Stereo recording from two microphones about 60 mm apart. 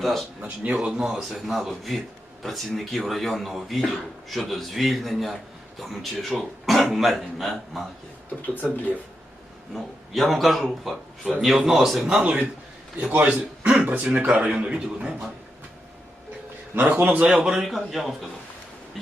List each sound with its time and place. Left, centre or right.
0.0 s a man's voice: centre
0.4 s a man's voice: right
0.8 s a man's voice: centre
8.4 s speech: left
9.7 s a man's voice: centre
12.2 s a man's voice: right
13.1 s a man's voice: right
14.0 s a man's voice: right
16.7 s a man's voice: right
17.3 s a man's voice: centre